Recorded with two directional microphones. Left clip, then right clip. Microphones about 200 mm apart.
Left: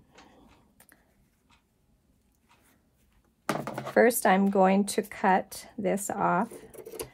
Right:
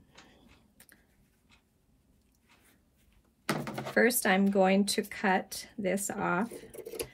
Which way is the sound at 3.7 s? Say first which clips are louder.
Left 5 dB; 40° left (ahead or behind).